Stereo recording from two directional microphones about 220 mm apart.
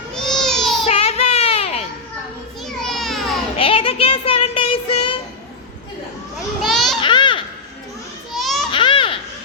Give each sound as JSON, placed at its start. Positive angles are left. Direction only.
{"t": 0.1, "sound": "child singing", "side_deg": 0}
{"t": 0.9, "sound": "child singing", "side_deg": 25}
{"t": 2.6, "sound": "children playing", "side_deg": 0}
{"t": 3.6, "sound": "child singing", "side_deg": 25}
{"t": 6.6, "sound": "children playing", "side_deg": 0}
{"t": 7.0, "sound": "babbling", "side_deg": 20}
{"t": 8.4, "sound": "a sound", "side_deg": 0}
{"t": 8.7, "sound": "a sound", "side_deg": 20}